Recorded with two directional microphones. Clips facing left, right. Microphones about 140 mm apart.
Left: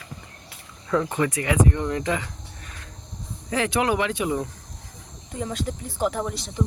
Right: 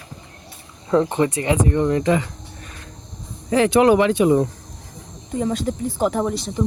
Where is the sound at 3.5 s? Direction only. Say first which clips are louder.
Right 9 dB; 30° right (ahead or behind).